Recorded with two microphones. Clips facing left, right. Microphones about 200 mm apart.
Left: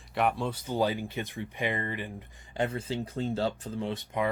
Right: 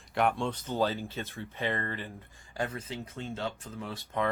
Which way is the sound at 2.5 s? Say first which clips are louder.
Left 5 dB; 25° left (ahead or behind).